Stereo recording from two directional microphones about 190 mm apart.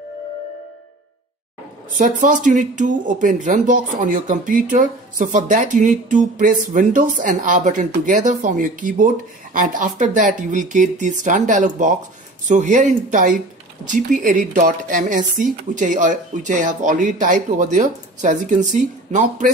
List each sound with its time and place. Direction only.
2.0 s speech: 40° right (ahead or behind)